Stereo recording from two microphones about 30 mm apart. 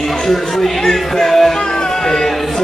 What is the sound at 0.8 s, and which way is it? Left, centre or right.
Music, centre.